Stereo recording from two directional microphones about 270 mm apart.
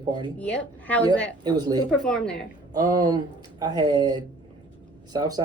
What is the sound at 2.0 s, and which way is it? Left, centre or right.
Speech, centre.